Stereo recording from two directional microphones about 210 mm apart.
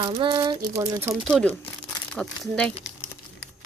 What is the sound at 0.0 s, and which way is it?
Speech, 25° right (ahead or behind).